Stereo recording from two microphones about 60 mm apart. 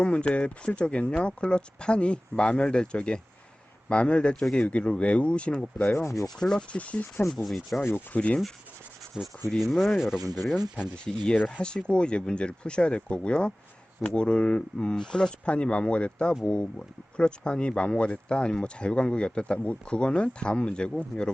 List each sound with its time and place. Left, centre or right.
0.0 s speech: centre
5.9 s rub: left
6.4 s speech: centre
6.7 s speech: left
7.4 s speech: centre
7.8 s rub: left
8.1 s speech: centre
9.2 s rub: centre
9.6 s speech: centre
10.2 s speech: right
11.6 s speech: centre
16.7 s speech: centre